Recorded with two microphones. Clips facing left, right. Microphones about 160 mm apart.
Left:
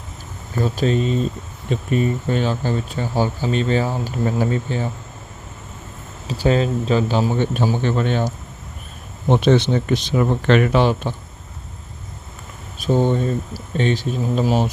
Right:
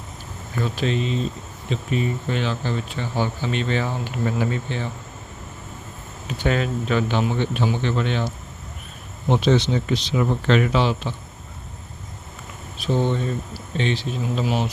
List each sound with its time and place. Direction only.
0.5 s speech: 40° left (ahead or behind)
6.2 s speech: 35° left (ahead or behind)
9.3 s speech: 55° left (ahead or behind)
12.8 s speech: 45° left (ahead or behind)